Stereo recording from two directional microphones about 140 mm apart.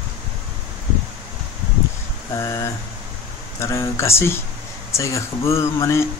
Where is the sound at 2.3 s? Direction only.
20° left (ahead or behind).